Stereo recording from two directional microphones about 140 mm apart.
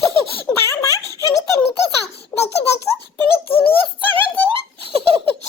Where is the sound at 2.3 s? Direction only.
15° left (ahead or behind).